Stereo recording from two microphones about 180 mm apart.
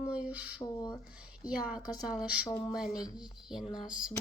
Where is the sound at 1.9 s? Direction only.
Centre (ahead or behind).